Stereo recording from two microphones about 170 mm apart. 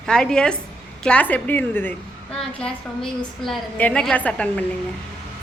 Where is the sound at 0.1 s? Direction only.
5° left (ahead or behind).